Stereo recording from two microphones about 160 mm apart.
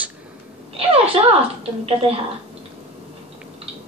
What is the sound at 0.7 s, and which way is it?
Speech, 40° right (ahead or behind).